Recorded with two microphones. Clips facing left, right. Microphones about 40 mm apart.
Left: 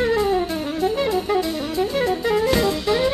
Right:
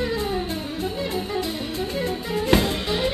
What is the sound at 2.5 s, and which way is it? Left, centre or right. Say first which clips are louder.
Music: left 1 dB; right.